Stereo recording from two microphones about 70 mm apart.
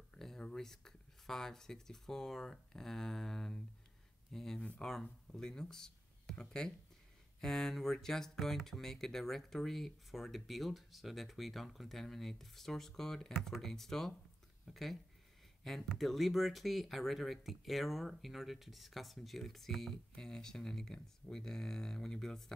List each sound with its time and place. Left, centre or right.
0.1 s speech: centre